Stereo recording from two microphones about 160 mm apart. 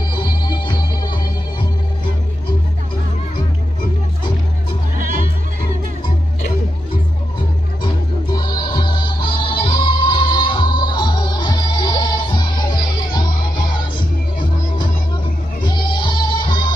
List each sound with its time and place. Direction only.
0.2 s music: 30° left (ahead or behind)
4.9 s music: 55° right (ahead or behind)
7.8 s music: 25° left (ahead or behind)
15.6 s music: 30° left (ahead or behind)